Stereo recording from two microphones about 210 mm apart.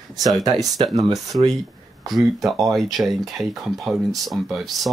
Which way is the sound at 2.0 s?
Centre (ahead or behind).